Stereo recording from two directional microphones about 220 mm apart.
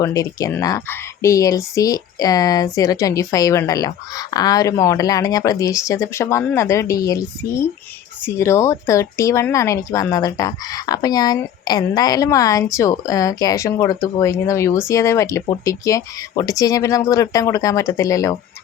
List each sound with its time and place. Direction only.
0.0 s speech: 15° left (ahead or behind)